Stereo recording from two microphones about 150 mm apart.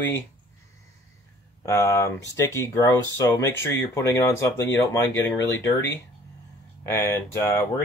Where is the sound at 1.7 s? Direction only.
20° left (ahead or behind).